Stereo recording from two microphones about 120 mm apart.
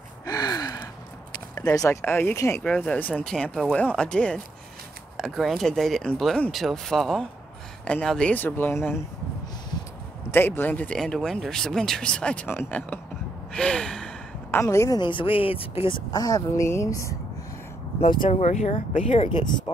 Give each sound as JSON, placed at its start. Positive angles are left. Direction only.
{"t": 0.2, "sound": "gasp", "side_deg": 30}
{"t": 1.6, "sound": "a woman's voice", "side_deg": 30}
{"t": 2.6, "sound": "speech", "side_deg": 10}
{"t": 10.3, "sound": "speech", "side_deg": 20}
{"t": 13.5, "sound": "gasp", "side_deg": 5}
{"t": 14.5, "sound": "a woman's voice", "side_deg": 25}
{"t": 15.0, "sound": "speech", "side_deg": 45}
{"t": 16.1, "sound": "a woman's voice", "side_deg": 35}
{"t": 18.2, "sound": "speech", "side_deg": 75}